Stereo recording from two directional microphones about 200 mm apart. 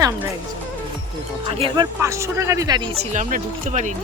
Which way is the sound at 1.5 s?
25° right (ahead or behind).